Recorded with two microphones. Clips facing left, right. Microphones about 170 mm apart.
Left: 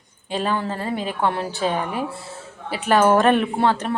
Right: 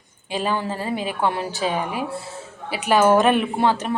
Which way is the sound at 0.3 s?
10° right (ahead or behind).